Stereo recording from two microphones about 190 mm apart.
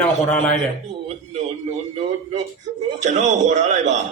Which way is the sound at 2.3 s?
35° right (ahead or behind).